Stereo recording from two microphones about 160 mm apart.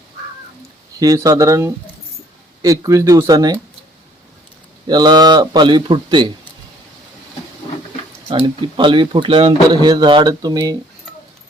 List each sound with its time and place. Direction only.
0.9 s speech: 20° right (ahead or behind)
4.9 s speech: 25° right (ahead or behind)
8.3 s speech: 30° right (ahead or behind)